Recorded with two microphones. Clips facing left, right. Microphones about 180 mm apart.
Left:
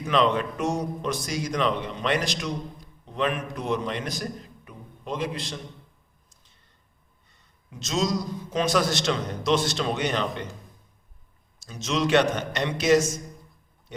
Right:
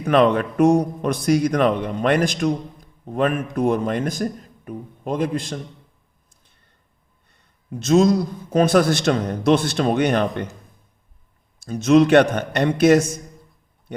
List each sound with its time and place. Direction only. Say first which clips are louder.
0.0 s speech: right 6 dB; 55° right (ahead or behind)
7.3 s a man's voice: right 16 dB; 55° right (ahead or behind)
11.6 s a man's voice: right 12 dB; 55° right (ahead or behind)